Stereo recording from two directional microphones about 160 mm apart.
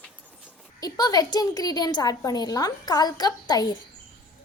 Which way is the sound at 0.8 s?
25° left (ahead or behind).